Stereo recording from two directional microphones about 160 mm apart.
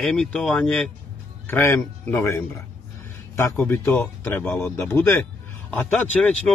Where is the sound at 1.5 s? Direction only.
15° left (ahead or behind).